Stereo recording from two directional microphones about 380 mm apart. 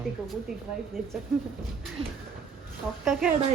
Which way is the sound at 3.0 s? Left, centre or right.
Centre.